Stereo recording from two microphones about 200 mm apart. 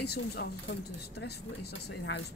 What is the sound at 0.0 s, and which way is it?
Speech, 55° left (ahead or behind).